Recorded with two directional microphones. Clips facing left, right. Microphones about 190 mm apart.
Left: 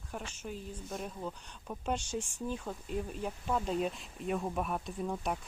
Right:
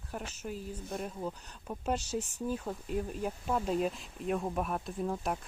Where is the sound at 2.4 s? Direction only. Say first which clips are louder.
Right 3 dB; 5° right (ahead or behind).